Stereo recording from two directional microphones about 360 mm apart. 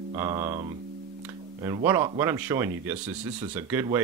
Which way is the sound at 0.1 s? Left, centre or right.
Centre.